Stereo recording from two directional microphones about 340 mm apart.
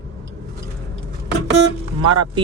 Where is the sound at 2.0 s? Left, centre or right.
Right.